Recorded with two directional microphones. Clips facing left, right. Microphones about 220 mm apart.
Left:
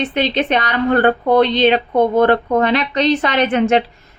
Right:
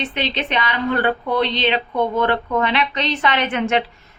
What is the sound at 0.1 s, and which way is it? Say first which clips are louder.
Speech: left 7 dB; 45° left (ahead or behind).